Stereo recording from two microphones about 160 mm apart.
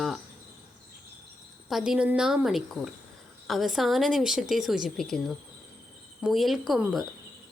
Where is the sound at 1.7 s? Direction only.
5° right (ahead or behind).